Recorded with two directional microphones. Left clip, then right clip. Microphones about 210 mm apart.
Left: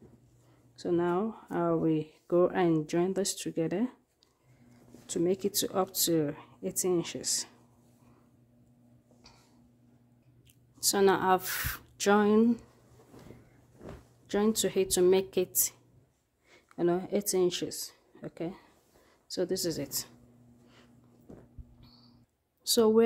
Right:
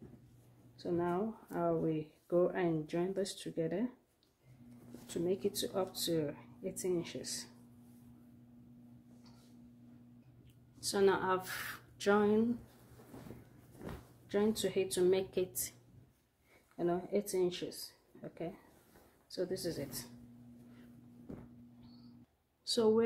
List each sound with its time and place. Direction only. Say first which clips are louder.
0.7 s speech: left 7 dB; 50° left (ahead or behind)
5.0 s speech: left 6 dB; 50° left (ahead or behind)
10.8 s speech: left 6 dB; 50° left (ahead or behind)
14.2 s speech: left 5 dB; 55° left (ahead or behind)
16.7 s speech: left 6 dB; 55° left (ahead or behind)
22.6 s speech: left 7 dB; 45° left (ahead or behind)